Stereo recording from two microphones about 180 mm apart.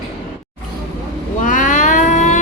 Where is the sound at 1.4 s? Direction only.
45° left (ahead or behind).